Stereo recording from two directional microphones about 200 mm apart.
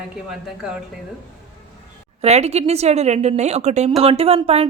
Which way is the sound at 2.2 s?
30° right (ahead or behind).